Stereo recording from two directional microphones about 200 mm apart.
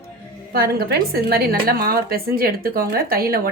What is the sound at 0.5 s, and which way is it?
A woman's voice, 50° right (ahead or behind).